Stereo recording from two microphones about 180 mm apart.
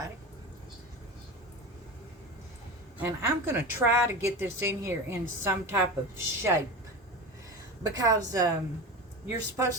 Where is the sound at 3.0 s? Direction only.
15° right (ahead or behind).